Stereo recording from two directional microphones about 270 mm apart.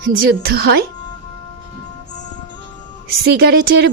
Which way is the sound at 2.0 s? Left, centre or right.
Left.